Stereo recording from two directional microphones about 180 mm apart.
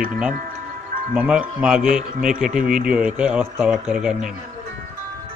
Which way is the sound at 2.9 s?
5° right (ahead or behind).